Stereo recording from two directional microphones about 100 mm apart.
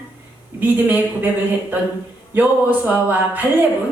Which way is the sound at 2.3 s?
20° right (ahead or behind).